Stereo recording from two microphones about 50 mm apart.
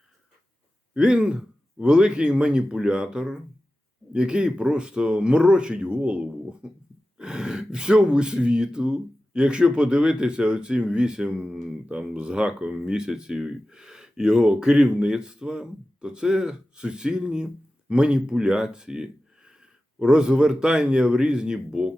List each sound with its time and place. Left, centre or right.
0.9 s speech: centre
11.9 s speech: centre